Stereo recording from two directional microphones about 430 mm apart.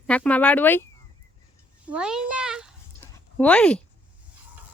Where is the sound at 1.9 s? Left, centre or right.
Centre.